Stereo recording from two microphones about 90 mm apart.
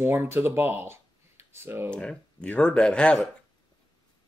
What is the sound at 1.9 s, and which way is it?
Speech, 10° left (ahead or behind).